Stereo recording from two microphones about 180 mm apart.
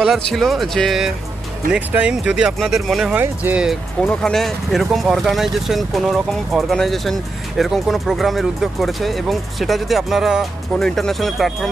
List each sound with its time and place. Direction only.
0.0 s speech: centre (ahead or behind)